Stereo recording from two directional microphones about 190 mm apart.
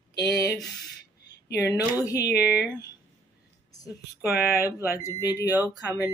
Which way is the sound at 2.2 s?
55° left (ahead or behind).